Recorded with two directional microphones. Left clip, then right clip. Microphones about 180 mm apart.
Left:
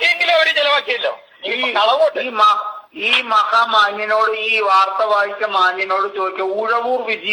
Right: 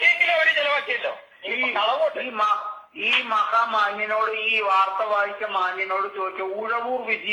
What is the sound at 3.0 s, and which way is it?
A man's voice, 25° left (ahead or behind).